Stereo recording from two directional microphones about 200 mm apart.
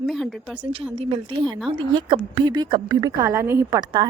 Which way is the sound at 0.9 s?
25° right (ahead or behind).